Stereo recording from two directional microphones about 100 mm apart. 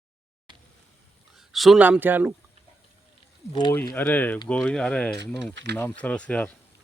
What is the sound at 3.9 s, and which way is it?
Speech, 20° left (ahead or behind).